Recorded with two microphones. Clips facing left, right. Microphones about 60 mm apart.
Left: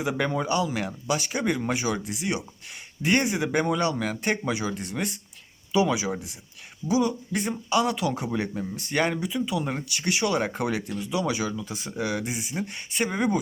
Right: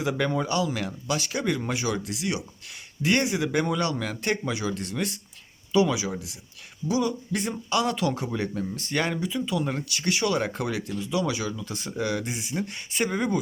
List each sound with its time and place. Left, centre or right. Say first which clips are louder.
0.0 s speech: even; centre
7.3 s speech: left 2 dB; centre